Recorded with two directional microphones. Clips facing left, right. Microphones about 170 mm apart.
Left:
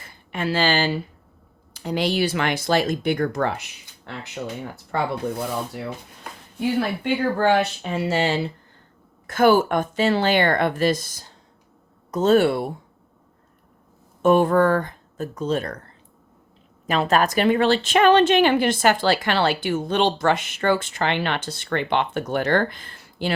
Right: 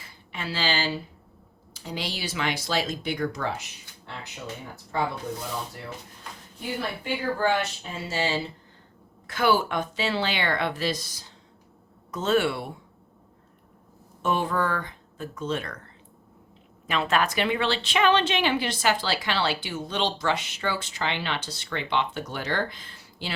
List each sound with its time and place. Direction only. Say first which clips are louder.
0.0 s speech: left 9 dB; 50° left (ahead or behind)
4.9 s speech: left 4 dB; 60° left (ahead or behind)
6.7 s speech: left 5 dB; 70° left (ahead or behind)
9.2 s a woman's voice: left 7 dB; 50° left (ahead or behind)
14.2 s speech: left 9 dB; 50° left (ahead or behind)
16.8 s a woman's voice: left 5 dB; 40° left (ahead or behind)